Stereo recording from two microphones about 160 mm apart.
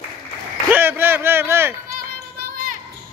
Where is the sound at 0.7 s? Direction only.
15° right (ahead or behind).